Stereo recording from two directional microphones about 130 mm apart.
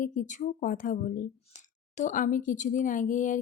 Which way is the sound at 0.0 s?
80° left.